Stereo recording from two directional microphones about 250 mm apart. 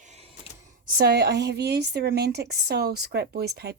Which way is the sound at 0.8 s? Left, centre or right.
Right.